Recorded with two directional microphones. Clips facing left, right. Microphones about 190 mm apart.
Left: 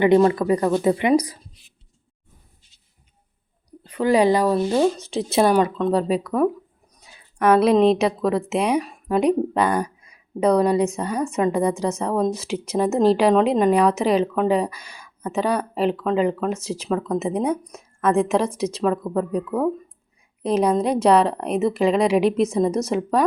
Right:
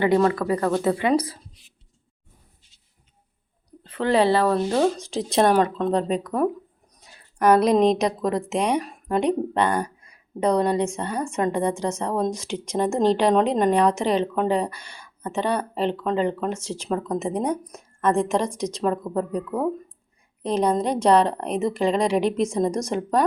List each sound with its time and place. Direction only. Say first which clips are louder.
0.0 s a woman's voice: left 4 dB; 20° left (ahead or behind)
3.7 s a woman's voice: left 3 dB; 10° left (ahead or behind)